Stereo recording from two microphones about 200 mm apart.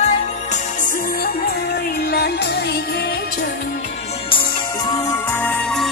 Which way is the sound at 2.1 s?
55° left (ahead or behind).